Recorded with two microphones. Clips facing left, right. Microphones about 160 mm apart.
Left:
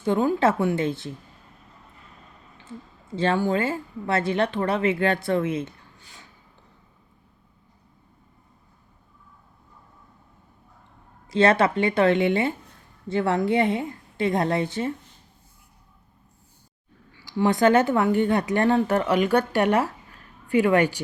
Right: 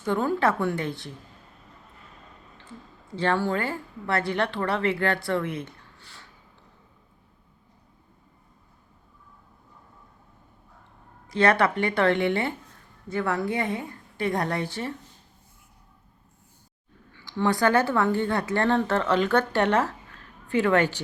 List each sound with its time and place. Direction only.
0.0 s a woman's voice: 20° left (ahead or behind)
3.1 s a woman's voice: 20° left (ahead or behind)
11.3 s a woman's voice: 25° left (ahead or behind)
17.2 s speech: 15° left (ahead or behind)